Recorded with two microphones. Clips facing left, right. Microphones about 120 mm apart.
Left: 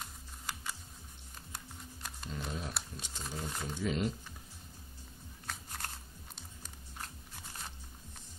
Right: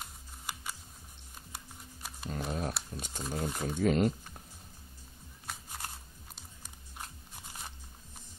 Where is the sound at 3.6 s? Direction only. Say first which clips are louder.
Right 7 dB; 50° right (ahead or behind).